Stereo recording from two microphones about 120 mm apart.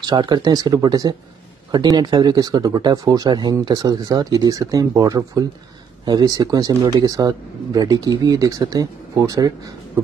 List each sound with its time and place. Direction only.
0.0 s speech: 35° right (ahead or behind)